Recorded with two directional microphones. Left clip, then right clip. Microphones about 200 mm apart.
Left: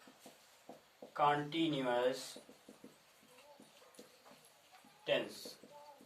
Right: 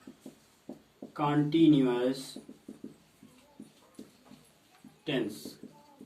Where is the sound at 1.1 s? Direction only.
15° left (ahead or behind).